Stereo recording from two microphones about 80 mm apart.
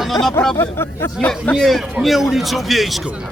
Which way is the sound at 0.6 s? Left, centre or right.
Left.